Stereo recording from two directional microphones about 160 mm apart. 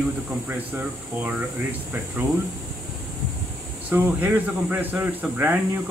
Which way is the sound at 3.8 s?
10° right (ahead or behind).